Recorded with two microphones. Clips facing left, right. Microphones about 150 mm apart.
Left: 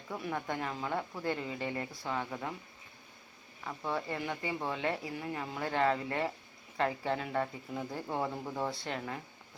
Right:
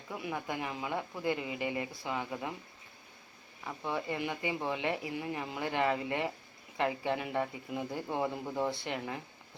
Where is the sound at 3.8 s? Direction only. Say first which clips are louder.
Right 1 dB; 15° right (ahead or behind).